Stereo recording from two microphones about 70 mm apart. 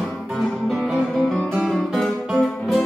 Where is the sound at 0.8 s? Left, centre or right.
Centre.